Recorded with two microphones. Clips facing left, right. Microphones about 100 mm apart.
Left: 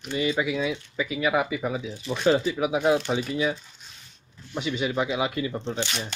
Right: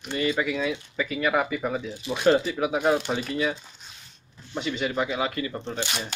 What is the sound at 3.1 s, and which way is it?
Speech, 10° left (ahead or behind).